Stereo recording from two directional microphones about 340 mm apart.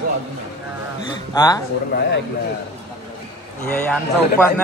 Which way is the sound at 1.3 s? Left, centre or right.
Centre.